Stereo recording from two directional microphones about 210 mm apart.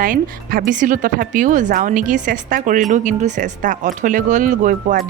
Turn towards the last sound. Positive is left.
turn(degrees=-35)  # may be behind; listen again after turning